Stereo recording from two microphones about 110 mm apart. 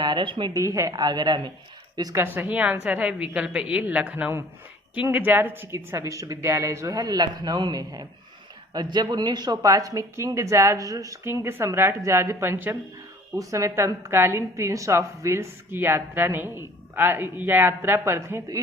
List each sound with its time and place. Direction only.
0.0 s a woman's voice: 45° right (ahead or behind)
0.5 s a woman's voice: 30° right (ahead or behind)
2.1 s a woman's voice: 20° right (ahead or behind)